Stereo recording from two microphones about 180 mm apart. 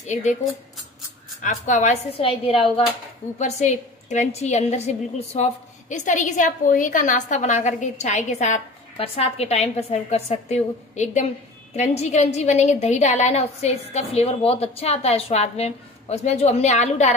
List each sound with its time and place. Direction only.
0.0 s a woman's voice: 40° left (ahead or behind)
1.4 s a woman's voice: 45° left (ahead or behind)
3.3 s a woman's voice: 40° left (ahead or behind)